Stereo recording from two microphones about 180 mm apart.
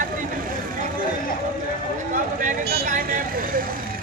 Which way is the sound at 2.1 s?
45° right (ahead or behind).